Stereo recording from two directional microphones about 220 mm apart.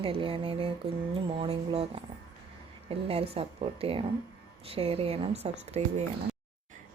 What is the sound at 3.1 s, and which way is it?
Speech, 25° right (ahead or behind).